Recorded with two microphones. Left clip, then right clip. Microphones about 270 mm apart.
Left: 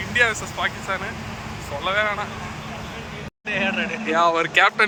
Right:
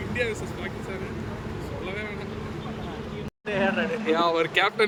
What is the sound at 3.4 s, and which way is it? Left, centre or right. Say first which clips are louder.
Speech: left 2 dB; right.